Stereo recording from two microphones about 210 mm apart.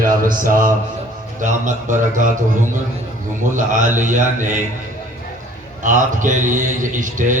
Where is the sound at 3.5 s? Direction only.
35° right (ahead or behind).